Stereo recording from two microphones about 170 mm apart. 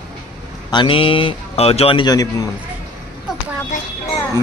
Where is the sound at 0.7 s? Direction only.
30° left (ahead or behind).